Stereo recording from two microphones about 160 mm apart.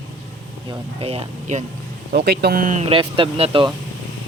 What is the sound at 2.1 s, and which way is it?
Speech, 90° right.